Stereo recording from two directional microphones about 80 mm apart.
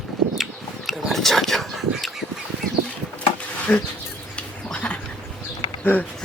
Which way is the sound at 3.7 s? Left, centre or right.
Centre.